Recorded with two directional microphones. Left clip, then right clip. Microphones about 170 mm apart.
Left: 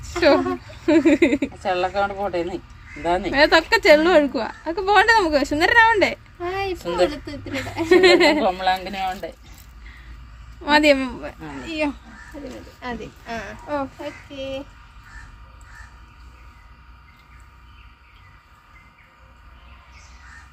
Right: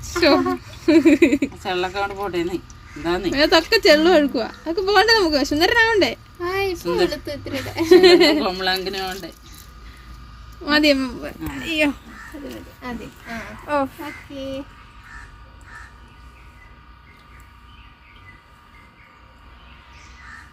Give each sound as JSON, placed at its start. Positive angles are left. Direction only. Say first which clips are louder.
{"t": 0.1, "sound": "speech", "louder": "even", "side_deg": 0}
{"t": 1.6, "sound": "speech", "louder": "left 2 dB", "side_deg": 30}
{"t": 3.3, "sound": "speech", "louder": "even", "side_deg": 0}
{"t": 6.8, "sound": "speech", "louder": "left 2 dB", "side_deg": 40}
{"t": 7.9, "sound": "speech", "louder": "right 2 dB", "side_deg": 0}
{"t": 8.4, "sound": "speech", "louder": "left 1 dB", "side_deg": 25}
{"t": 10.6, "sound": "speech", "louder": "left 1 dB", "side_deg": 0}
{"t": 13.7, "sound": "speech", "louder": "right 5 dB", "side_deg": 0}